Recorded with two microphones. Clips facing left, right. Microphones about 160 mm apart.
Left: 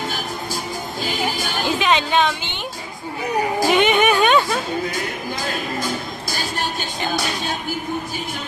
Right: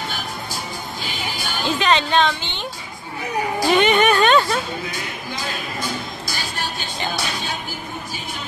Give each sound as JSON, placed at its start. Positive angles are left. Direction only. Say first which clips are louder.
{"t": 1.8, "sound": "a woman's voice", "louder": "right 1 dB", "side_deg": 10}
{"t": 3.6, "sound": "music", "louder": "right 1 dB", "side_deg": 10}
{"t": 5.4, "sound": "music", "louder": "left 3 dB", "side_deg": 45}